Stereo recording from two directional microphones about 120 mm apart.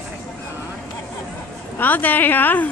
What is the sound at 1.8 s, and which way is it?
Speech, 15° left (ahead or behind).